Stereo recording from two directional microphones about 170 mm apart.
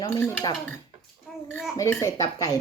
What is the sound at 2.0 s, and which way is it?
Speech, 20° left (ahead or behind).